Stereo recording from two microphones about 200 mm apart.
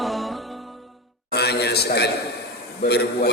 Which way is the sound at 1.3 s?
55° left (ahead or behind).